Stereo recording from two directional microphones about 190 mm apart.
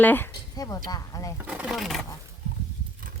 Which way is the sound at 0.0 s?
10° left (ahead or behind).